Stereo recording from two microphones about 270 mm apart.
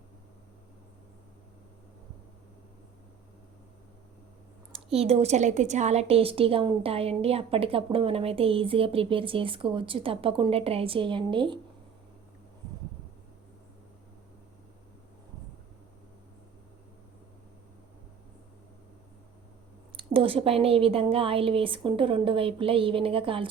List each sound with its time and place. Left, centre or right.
4.9 s a woman's voice: right
20.0 s a woman's voice: centre